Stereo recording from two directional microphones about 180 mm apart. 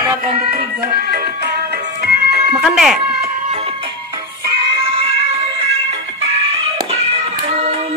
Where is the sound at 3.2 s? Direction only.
40° right (ahead or behind).